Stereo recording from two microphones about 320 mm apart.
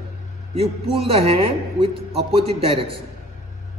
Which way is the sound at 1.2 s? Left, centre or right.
Centre.